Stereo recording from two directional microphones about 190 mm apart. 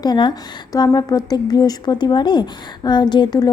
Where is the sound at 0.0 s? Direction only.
25° left (ahead or behind).